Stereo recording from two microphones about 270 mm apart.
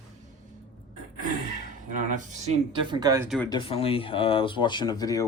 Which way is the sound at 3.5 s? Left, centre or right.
Centre.